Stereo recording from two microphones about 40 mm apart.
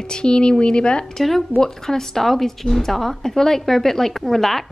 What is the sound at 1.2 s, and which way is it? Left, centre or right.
A woman's voice, centre.